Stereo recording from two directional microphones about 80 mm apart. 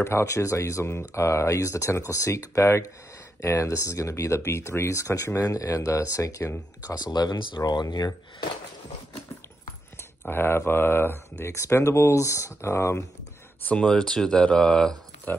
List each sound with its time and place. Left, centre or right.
0.0 s speech: left
10.3 s speech: left
13.7 s speech: centre
15.3 s speech: left